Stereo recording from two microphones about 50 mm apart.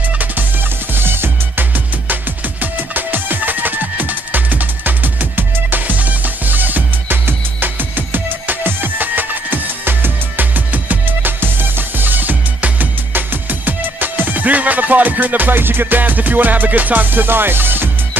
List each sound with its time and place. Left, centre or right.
0.9 s music: right